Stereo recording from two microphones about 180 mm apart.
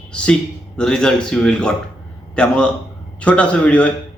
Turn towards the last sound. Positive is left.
turn(degrees=5)  # may be behind; listen again after turning